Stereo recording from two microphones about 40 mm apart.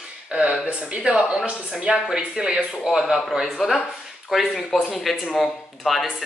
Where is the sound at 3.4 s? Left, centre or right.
Centre.